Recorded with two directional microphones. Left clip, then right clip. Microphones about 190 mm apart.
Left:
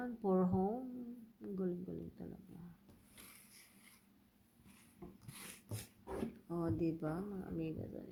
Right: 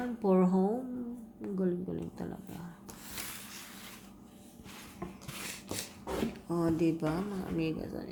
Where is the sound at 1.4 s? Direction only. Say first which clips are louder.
Right 8 dB; 10° left (ahead or behind).